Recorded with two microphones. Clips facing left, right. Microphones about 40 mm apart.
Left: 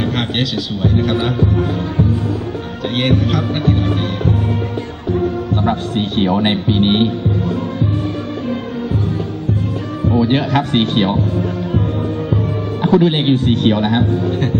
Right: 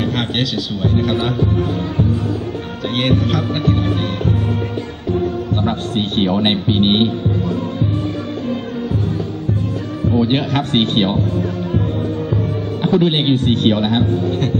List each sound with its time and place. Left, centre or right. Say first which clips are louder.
0.0 s a man's voice: left 1 dB; centre
3.0 s speech: left 1 dB; centre
5.6 s speech: left 3 dB; right
10.2 s speech: left 2 dB; right
12.8 s speech: left 2 dB; right